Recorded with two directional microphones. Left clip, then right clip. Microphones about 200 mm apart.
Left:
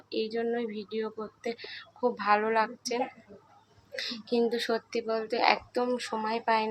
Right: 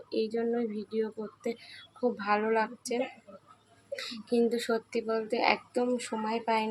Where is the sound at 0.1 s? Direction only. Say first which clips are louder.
Even; 15° right (ahead or behind).